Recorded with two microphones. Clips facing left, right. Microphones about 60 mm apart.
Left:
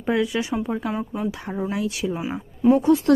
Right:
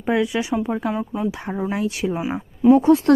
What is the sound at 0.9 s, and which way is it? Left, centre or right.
Speech, centre.